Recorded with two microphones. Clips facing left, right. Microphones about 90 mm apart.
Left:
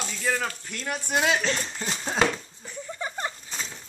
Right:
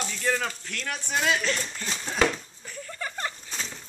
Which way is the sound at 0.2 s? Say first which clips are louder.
Even; 5° left (ahead or behind).